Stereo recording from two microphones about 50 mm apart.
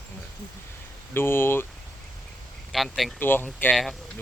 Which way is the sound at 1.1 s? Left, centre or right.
Left.